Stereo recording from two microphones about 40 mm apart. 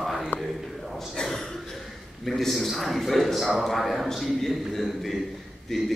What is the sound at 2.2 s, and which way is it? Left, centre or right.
A man's voice, centre.